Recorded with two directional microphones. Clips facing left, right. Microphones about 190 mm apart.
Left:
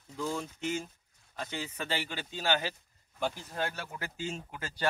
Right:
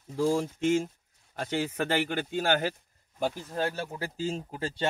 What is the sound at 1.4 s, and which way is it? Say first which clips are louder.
Speech: right 8 dB; 60° right (ahead or behind).